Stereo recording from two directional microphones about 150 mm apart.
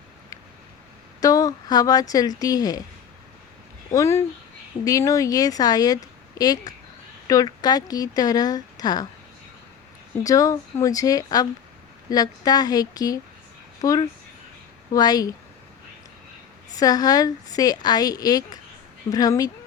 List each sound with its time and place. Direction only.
1.2 s speech: 25° left (ahead or behind)
3.9 s speech: 20° left (ahead or behind)
10.2 s speech: 20° left (ahead or behind)
16.7 s speech: 25° left (ahead or behind)